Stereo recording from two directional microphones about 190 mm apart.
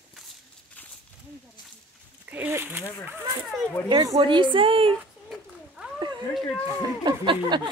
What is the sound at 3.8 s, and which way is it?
Speech, 20° right (ahead or behind).